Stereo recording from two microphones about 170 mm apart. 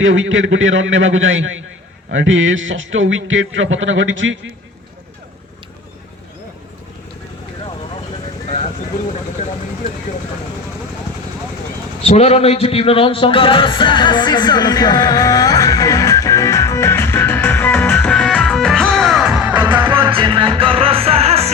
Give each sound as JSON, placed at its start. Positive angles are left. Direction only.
{"t": 0.0, "sound": "speech", "side_deg": -90}
{"t": 2.0, "sound": "speech", "side_deg": -90}
{"t": 8.4, "sound": "a sound", "side_deg": 35}
{"t": 12.0, "sound": "music", "side_deg": 40}
{"t": 20.0, "sound": "music", "side_deg": -30}